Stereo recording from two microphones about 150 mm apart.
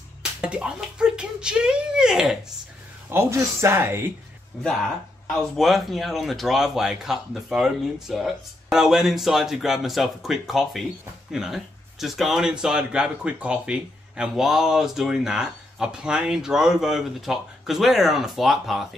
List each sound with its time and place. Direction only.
0.2 s speech: 5° right (ahead or behind)
3.1 s speech: 15° right (ahead or behind)
5.3 s speech: centre (ahead or behind)